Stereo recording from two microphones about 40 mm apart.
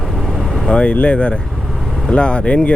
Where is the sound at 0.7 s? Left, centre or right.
Left.